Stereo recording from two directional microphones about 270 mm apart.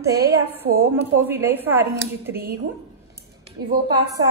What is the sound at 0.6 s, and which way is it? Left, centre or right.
A woman's voice, centre.